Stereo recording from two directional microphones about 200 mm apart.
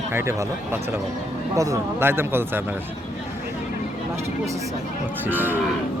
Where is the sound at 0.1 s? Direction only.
10° right (ahead or behind).